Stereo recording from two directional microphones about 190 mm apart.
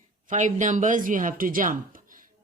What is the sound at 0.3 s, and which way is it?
A woman's voice, 40° right (ahead or behind).